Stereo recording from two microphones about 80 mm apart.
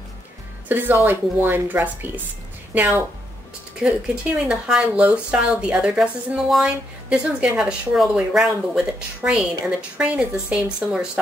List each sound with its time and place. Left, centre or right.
0.7 s speech: right
3.8 s speech: centre